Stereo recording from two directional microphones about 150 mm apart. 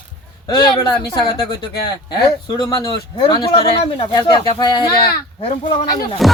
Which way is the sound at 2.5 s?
30° left (ahead or behind).